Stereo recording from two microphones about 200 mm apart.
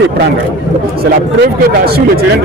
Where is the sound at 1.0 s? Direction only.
50° right (ahead or behind).